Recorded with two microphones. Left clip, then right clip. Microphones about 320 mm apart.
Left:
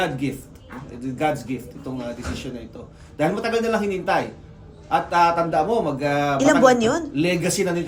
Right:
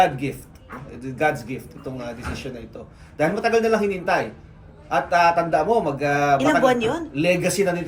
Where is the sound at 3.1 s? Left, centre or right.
Centre.